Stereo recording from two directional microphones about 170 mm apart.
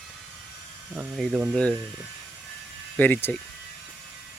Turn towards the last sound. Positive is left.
turn(degrees=10)  # may be behind; listen again after turning